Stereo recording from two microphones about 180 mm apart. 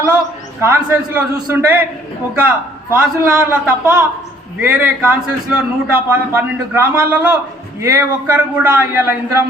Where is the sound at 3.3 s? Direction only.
5° right (ahead or behind).